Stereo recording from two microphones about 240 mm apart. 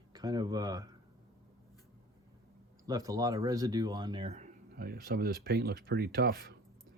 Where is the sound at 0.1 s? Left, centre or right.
Centre.